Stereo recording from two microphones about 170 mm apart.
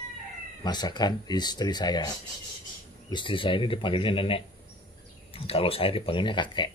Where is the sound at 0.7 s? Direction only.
25° left (ahead or behind).